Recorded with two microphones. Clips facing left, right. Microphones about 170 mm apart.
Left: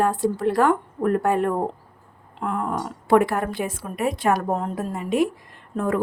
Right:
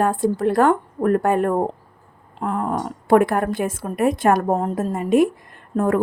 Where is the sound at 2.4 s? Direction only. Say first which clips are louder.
Right 2 dB; 40° right (ahead or behind).